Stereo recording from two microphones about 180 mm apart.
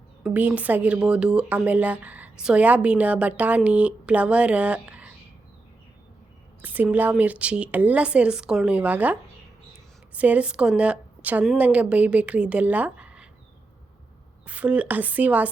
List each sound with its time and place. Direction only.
0.2 s a woman's voice: 5° right (ahead or behind)
6.6 s a woman's voice: 10° right (ahead or behind)
10.2 s a woman's voice: 10° right (ahead or behind)
14.4 s a woman's voice: 5° right (ahead or behind)